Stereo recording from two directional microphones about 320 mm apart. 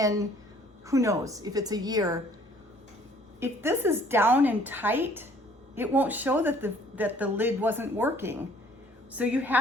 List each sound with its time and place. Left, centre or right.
0.0 s speech: centre
3.4 s a woman's voice: centre